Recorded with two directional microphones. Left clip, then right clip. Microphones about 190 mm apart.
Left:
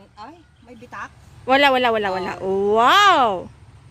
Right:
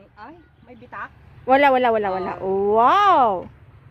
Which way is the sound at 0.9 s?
70° left (ahead or behind).